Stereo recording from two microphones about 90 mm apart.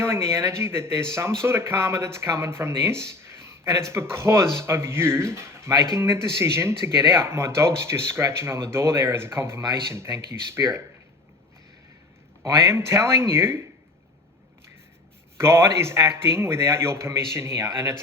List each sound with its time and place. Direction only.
0.0 s speech: 30° right (ahead or behind)
3.1 s a sound: 30° right (ahead or behind)
4.1 s speech: 30° right (ahead or behind)
12.4 s speech: 30° right (ahead or behind)
15.4 s speech: 30° right (ahead or behind)